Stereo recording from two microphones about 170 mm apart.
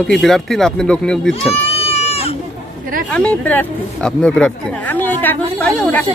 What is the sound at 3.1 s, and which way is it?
Speech, 5° left (ahead or behind).